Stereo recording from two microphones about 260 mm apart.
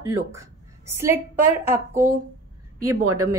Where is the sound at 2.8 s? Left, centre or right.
Right.